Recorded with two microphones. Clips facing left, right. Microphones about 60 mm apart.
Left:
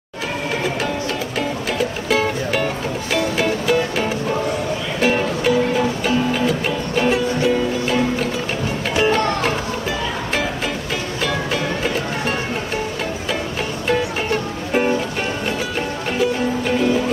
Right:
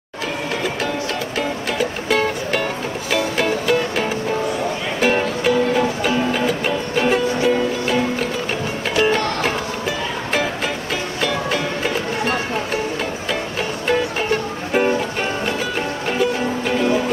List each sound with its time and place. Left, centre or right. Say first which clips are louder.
2.0 s music: even; centre
13.8 s music: right 1 dB; centre
16.1 s music: left 1 dB; centre